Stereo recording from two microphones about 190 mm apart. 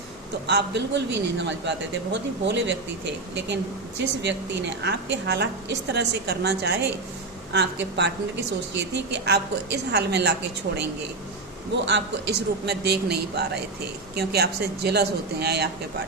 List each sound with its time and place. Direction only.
0.4 s a man's voice: 65° right (ahead or behind)
11.9 s a woman's voice: 65° right (ahead or behind)